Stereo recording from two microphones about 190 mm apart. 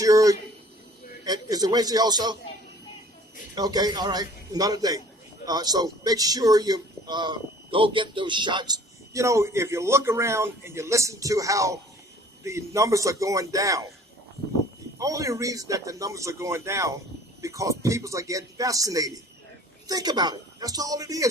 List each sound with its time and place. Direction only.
0.0 s a man's voice: 20° right (ahead or behind)
3.5 s a man's voice: 20° right (ahead or behind)
14.9 s a man's voice: 15° right (ahead or behind)